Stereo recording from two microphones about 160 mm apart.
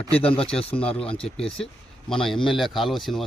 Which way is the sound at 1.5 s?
5° left (ahead or behind).